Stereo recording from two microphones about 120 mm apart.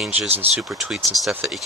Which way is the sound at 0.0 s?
Centre (ahead or behind).